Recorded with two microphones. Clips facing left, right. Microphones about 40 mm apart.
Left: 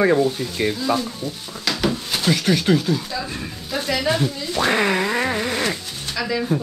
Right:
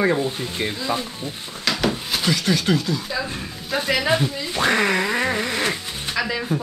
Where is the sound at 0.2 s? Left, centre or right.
Right.